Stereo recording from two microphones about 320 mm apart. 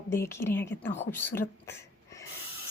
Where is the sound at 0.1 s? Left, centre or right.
Centre.